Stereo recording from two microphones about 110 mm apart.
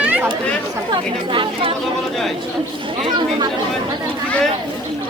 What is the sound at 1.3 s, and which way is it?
Speech, 50° right (ahead or behind).